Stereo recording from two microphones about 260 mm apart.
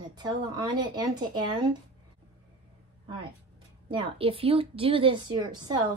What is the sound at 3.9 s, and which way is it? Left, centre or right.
A woman's voice, centre.